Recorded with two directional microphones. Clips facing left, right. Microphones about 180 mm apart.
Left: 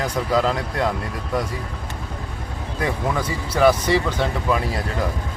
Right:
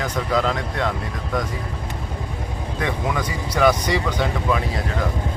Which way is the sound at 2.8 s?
5° left (ahead or behind).